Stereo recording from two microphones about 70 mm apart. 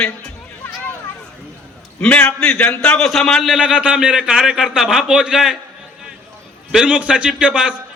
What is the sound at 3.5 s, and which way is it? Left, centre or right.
A man's voice, centre.